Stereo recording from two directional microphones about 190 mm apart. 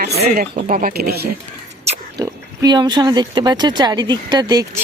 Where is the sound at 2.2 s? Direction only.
20° right (ahead or behind).